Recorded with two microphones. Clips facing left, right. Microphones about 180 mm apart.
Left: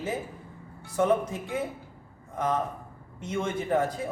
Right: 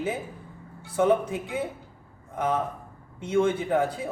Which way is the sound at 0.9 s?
5° right (ahead or behind).